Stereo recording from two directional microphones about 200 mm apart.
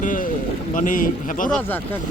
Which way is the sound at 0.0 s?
40° left (ahead or behind).